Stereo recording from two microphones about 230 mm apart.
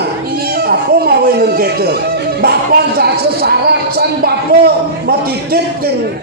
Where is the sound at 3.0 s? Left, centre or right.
Right.